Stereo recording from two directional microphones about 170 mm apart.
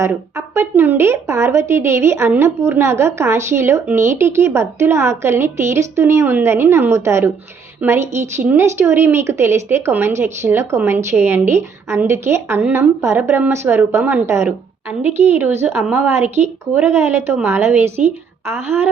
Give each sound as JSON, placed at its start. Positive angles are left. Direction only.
{"t": 0.0, "sound": "a woman's voice", "side_deg": -15}